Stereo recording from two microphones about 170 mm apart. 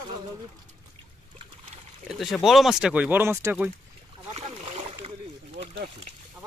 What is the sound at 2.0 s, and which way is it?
Speech, centre (ahead or behind).